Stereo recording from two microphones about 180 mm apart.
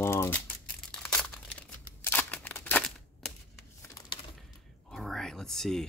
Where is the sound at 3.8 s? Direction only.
20° left (ahead or behind).